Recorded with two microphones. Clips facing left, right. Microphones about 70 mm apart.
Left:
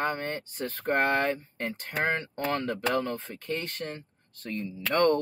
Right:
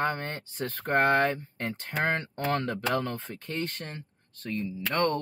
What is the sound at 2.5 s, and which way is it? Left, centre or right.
Speech, centre.